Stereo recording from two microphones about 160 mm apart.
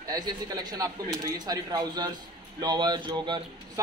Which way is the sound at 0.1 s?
25° right (ahead or behind).